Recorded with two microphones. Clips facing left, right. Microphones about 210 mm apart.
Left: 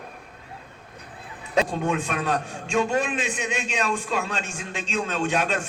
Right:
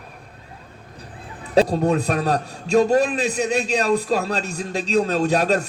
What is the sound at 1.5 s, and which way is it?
A man's voice, 35° right (ahead or behind).